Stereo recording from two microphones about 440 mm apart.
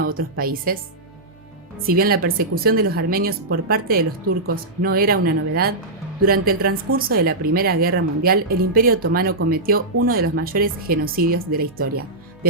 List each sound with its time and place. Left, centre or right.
0.0 s speech: centre
1.9 s speech: centre